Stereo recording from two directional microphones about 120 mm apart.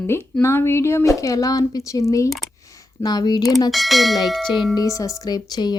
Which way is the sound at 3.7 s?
Centre (ahead or behind).